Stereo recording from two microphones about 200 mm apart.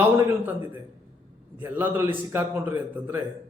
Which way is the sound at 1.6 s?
10° right (ahead or behind).